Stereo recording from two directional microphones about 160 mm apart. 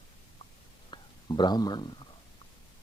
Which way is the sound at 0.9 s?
25° left (ahead or behind).